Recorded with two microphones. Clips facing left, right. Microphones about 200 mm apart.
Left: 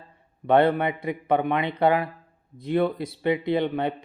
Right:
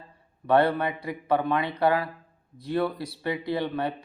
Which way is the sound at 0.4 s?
20° left (ahead or behind).